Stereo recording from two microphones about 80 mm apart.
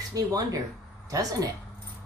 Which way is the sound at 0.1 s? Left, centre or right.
Right.